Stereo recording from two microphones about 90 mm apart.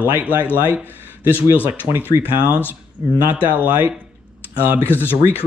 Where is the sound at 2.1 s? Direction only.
20° right (ahead or behind).